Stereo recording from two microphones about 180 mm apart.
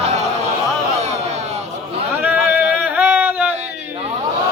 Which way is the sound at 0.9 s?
40° right (ahead or behind).